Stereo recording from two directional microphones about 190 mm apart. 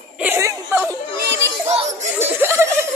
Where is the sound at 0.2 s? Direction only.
10° right (ahead or behind).